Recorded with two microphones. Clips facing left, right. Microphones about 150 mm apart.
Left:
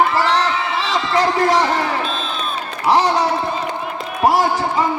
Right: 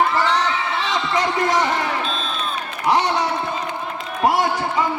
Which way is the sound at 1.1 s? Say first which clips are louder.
Left 5 dB; 35° left (ahead or behind).